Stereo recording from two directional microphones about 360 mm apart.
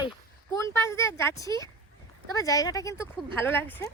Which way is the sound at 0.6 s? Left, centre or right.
Centre.